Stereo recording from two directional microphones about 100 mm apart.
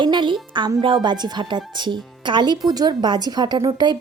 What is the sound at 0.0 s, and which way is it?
Music, 50° right (ahead or behind).